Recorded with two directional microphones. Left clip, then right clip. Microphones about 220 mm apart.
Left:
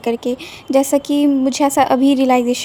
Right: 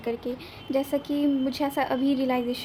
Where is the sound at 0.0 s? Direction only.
35° left (ahead or behind).